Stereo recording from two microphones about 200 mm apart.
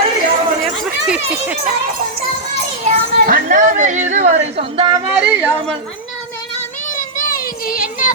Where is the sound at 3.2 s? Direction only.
45° right (ahead or behind); by 5.0 s 25° right (ahead or behind).